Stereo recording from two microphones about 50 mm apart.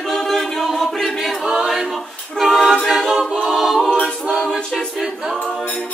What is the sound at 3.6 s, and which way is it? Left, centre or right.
Music, centre.